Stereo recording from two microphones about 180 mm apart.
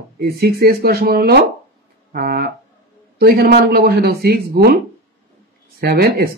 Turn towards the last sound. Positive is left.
turn(degrees=-60)  # may be behind; listen again after turning